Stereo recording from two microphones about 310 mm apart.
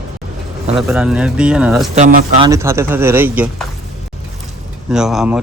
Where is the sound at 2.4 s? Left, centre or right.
Centre.